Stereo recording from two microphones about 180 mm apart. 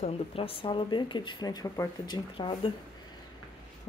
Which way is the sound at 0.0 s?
30° left (ahead or behind).